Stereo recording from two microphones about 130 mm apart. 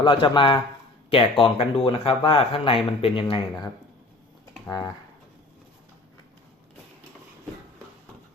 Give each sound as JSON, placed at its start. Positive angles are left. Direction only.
{"t": 0.0, "sound": "speech", "side_deg": 40}
{"t": 4.6, "sound": "speech", "side_deg": 25}